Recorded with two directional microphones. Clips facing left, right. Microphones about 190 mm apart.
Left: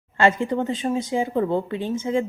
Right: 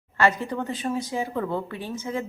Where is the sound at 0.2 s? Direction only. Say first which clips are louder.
Left 4 dB; 25° left (ahead or behind).